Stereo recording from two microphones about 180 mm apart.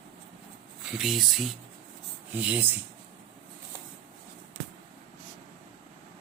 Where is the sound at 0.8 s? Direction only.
Centre (ahead or behind).